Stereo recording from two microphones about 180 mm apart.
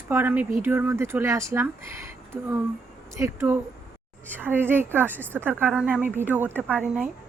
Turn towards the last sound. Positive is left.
turn(degrees=-10)  # may be behind; listen again after turning